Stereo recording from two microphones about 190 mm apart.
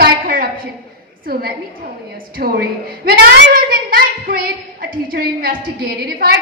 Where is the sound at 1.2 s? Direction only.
50° right (ahead or behind).